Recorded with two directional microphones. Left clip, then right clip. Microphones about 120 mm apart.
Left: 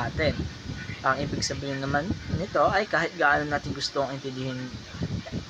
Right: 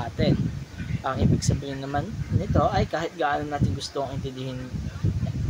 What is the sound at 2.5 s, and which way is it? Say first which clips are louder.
Speech: left 1 dB; 5° right (ahead or behind).